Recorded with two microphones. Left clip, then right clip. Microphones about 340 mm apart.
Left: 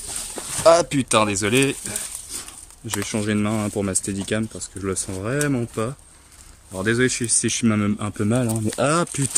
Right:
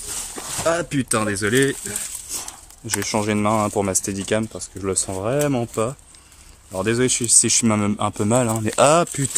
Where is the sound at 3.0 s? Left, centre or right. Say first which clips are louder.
Right 3 dB; centre.